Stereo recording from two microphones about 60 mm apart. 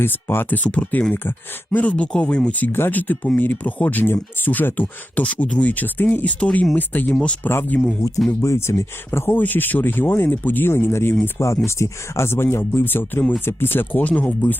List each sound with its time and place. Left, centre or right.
0.0 s speech: left
0.6 s speech: left
1.1 s speech: left
1.8 s speech: left
2.7 s speech: left
5.2 s speech: centre
8.3 s speech: left
9.3 s speech: left
11.3 s speech: left